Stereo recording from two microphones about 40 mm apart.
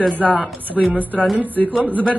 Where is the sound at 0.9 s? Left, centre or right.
Right.